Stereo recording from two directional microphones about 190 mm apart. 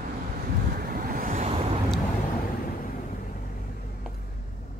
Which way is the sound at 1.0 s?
45° right (ahead or behind).